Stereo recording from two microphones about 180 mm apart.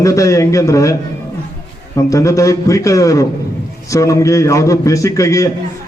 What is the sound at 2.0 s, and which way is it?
A man's voice, 15° left (ahead or behind).